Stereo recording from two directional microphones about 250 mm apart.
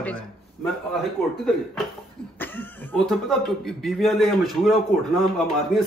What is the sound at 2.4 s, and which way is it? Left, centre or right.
Cough, centre.